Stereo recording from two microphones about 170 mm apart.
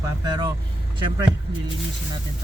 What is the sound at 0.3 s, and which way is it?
Speech, 25° right (ahead or behind).